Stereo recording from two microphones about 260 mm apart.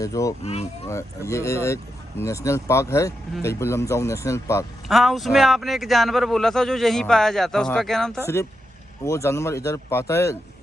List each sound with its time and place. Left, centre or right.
0.0 s speech: centre
0.4 s speech: left
0.9 s speech: centre
4.9 s speech: centre